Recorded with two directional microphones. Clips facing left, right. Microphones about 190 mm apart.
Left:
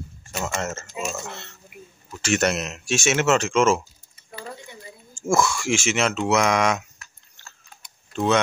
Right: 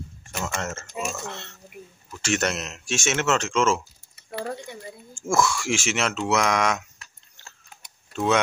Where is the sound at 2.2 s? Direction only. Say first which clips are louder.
Left 3 dB; 10° left (ahead or behind).